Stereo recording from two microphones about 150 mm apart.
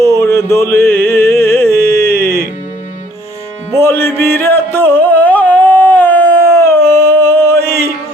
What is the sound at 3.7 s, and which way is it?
Music, 15° left (ahead or behind).